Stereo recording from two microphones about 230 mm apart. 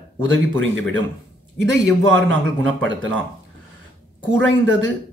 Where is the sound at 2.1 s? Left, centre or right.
Right.